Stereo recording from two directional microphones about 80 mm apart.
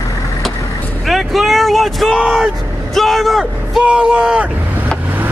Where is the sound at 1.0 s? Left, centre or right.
Centre.